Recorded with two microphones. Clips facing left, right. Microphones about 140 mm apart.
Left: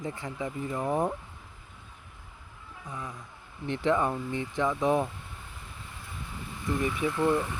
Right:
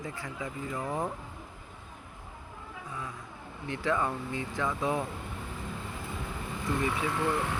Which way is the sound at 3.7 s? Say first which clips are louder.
Left 4 dB; 20° left (ahead or behind).